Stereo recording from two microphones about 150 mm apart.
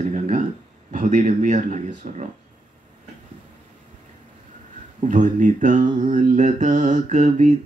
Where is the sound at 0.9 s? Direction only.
55° right (ahead or behind).